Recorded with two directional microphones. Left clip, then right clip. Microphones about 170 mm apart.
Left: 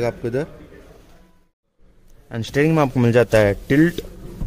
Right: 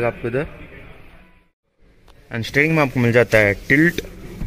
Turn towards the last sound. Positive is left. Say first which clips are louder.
# right 1 dB
turn(degrees=0)  # may be behind; listen again after turning